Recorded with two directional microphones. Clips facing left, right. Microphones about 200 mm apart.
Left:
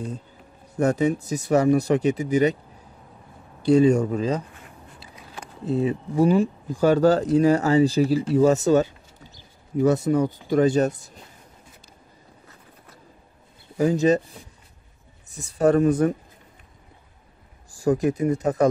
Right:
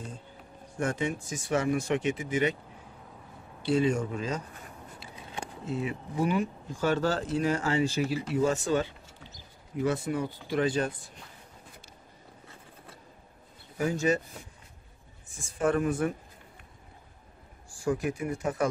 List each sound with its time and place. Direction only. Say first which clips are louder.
0.7 s speech: left 9 dB; 40° left (ahead or behind)
3.6 s speech: left 9 dB; 40° left (ahead or behind)
5.1 s a sound: right 2 dB; 30° right (ahead or behind)
5.7 s speech: left 10 dB; 35° left (ahead or behind)
15.2 s speech: left 8 dB; 40° left (ahead or behind)
17.6 s a sound: left 8 dB; 40° left (ahead or behind)
18.1 s speech: left 9 dB; 40° left (ahead or behind)